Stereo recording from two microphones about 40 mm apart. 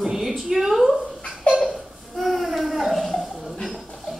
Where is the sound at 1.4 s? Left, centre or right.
Left.